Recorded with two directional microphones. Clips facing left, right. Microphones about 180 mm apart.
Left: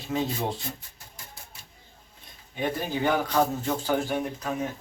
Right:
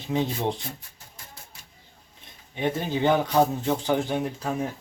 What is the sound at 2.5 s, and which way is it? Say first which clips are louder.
A man's voice: right 2 dB; 25° right (ahead or behind).